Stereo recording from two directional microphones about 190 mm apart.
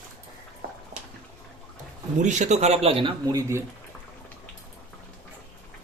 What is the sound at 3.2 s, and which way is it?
Speech, 15° right (ahead or behind).